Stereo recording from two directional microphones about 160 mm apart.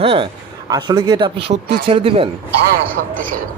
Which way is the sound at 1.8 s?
35° right (ahead or behind).